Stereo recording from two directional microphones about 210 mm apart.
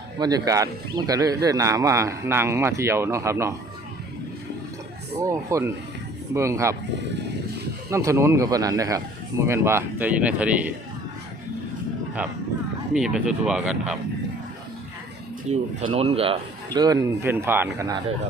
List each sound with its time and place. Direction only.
0.2 s speech: 20° right (ahead or behind)
5.2 s speech: 15° right (ahead or behind)
7.9 s speech: 15° right (ahead or behind)
12.9 s speech: 5° right (ahead or behind)
15.4 s speech: 25° right (ahead or behind)